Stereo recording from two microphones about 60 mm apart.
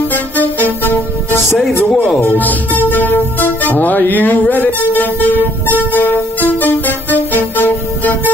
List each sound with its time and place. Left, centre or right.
0.1 s music: left